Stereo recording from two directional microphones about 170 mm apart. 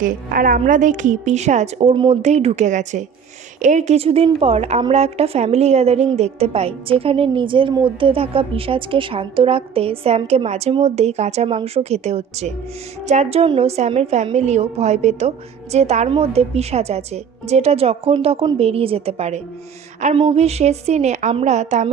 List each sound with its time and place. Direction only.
0.0 s a woman's voice: 55° right (ahead or behind)